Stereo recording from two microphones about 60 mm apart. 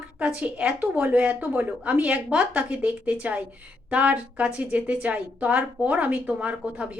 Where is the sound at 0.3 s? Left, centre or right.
Right.